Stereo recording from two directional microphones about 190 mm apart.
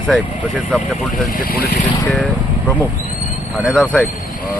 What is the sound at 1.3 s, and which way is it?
Speech, 50° left (ahead or behind).